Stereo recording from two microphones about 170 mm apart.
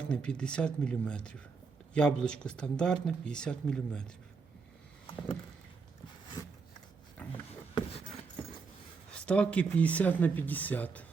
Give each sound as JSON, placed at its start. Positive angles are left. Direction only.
{"t": 0.0, "sound": "speech", "side_deg": 5}
{"t": 6.4, "sound": "filing", "side_deg": 20}
{"t": 7.8, "sound": "a sound", "side_deg": 35}
{"t": 9.1, "sound": "speech", "side_deg": 5}